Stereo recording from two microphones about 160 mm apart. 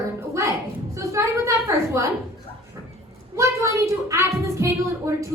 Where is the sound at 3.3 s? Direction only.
20° right (ahead or behind).